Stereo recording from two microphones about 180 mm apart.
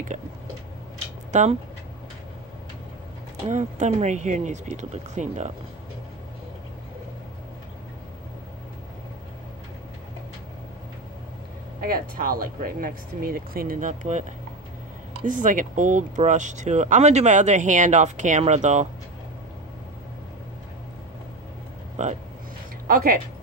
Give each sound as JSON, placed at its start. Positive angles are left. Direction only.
{"t": 1.3, "sound": "speech", "side_deg": -40}
{"t": 3.4, "sound": "speech", "side_deg": -40}
{"t": 11.8, "sound": "speech", "side_deg": -55}
{"t": 15.2, "sound": "speech", "side_deg": -45}
{"t": 22.0, "sound": "speech", "side_deg": -40}